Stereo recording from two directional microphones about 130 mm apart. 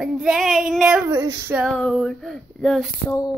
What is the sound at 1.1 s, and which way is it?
Speech, 25° right (ahead or behind).